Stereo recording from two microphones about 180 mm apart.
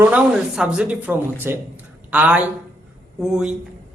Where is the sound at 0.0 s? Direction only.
5° right (ahead or behind).